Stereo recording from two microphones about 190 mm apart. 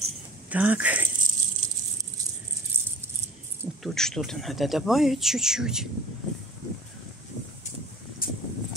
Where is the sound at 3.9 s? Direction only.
5° left (ahead or behind).